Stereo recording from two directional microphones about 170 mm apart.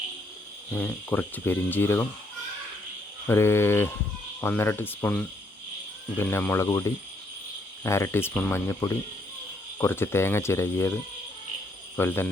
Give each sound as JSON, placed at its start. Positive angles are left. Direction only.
{"t": 0.7, "sound": "speech", "side_deg": 10}
{"t": 3.2, "sound": "speech", "side_deg": 15}
{"t": 11.9, "sound": "speech", "side_deg": 15}